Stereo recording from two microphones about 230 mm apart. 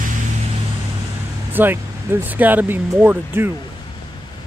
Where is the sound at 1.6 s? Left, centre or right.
Centre.